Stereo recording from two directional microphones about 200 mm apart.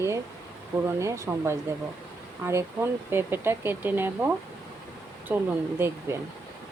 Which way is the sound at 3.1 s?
10° right (ahead or behind).